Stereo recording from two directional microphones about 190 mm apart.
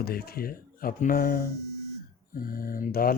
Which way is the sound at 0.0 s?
55° left (ahead or behind).